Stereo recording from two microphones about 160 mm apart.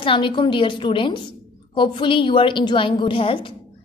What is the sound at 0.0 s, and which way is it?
A woman's voice, 30° left (ahead or behind).